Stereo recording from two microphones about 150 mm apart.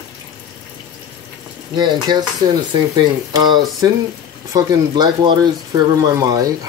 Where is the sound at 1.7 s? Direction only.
30° right (ahead or behind).